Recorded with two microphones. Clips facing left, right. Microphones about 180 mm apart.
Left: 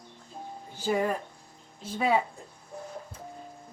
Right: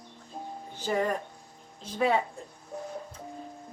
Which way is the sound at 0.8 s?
10° left (ahead or behind).